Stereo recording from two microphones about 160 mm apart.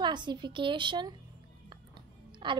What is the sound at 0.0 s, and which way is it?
A woman's voice, 30° right (ahead or behind).